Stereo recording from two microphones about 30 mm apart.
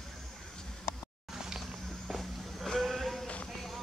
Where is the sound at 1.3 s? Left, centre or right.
Centre.